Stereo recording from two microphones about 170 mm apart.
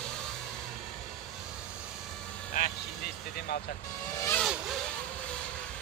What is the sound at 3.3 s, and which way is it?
Speech, 70° left (ahead or behind).